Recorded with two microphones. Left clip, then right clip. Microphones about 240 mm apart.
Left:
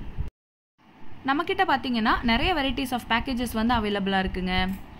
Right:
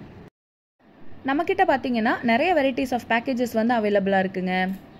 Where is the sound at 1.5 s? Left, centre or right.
Centre.